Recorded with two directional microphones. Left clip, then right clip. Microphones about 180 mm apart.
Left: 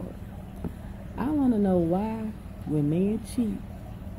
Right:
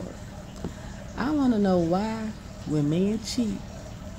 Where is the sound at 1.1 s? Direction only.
15° right (ahead or behind).